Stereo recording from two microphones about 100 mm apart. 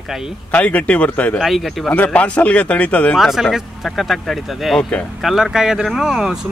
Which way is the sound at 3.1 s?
Centre (ahead or behind).